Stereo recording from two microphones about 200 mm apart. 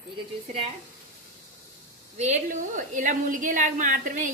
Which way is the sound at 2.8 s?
40° right (ahead or behind).